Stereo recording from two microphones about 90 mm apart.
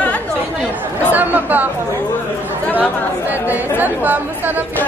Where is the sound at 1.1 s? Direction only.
20° right (ahead or behind).